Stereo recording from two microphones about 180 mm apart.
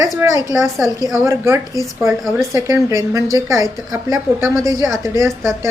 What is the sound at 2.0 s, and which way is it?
Speech, centre (ahead or behind).